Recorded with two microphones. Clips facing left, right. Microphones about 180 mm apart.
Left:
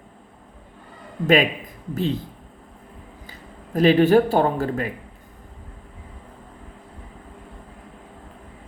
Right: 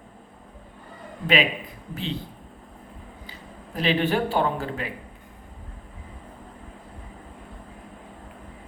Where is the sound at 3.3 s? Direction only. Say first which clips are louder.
Left 1 dB; 45° left (ahead or behind).